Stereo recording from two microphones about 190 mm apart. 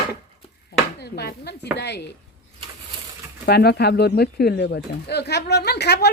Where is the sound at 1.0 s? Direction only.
60° left (ahead or behind).